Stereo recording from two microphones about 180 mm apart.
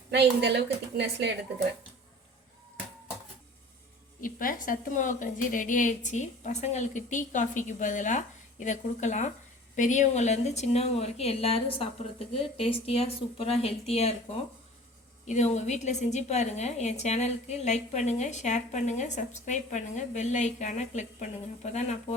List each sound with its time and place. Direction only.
0.1 s a woman's voice: 70° right (ahead or behind)
4.2 s a woman's voice: 50° left (ahead or behind)
15.3 s a woman's voice: 40° left (ahead or behind)